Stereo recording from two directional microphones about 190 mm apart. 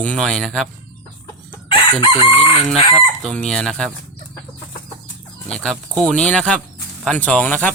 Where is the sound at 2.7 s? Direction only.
Centre (ahead or behind).